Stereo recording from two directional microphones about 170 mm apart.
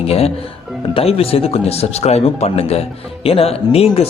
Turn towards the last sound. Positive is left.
turn(degrees=35)  # may be behind; listen again after turning